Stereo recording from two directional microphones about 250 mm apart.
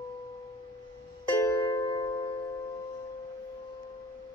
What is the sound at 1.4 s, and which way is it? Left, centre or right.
Music, centre.